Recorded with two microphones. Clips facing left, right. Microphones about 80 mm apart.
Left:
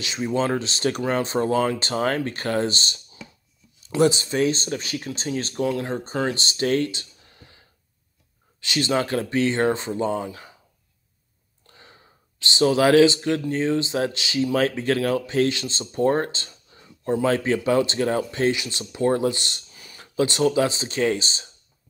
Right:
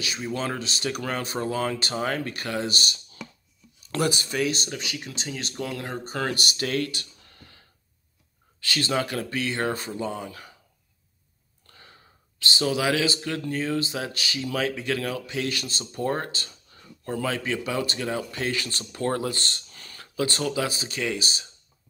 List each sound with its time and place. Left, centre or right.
0.0 s speech: left
4.0 s a man's voice: left
11.6 s speech: left
17.3 s a man's voice: left
18.5 s speech: centre
19.7 s a sound: centre
20.2 s speech: left